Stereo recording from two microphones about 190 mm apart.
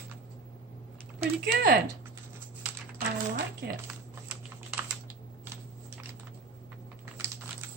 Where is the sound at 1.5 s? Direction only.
50° right (ahead or behind).